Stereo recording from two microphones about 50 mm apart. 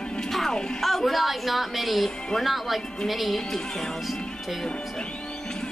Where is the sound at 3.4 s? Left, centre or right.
Centre.